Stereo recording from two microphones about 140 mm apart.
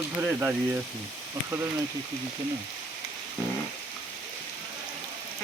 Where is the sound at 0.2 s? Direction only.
20° right (ahead or behind).